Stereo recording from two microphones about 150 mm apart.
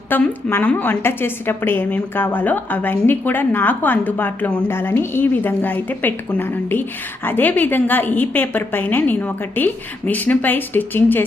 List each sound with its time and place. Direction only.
0.1 s a woman's voice: 10° left (ahead or behind)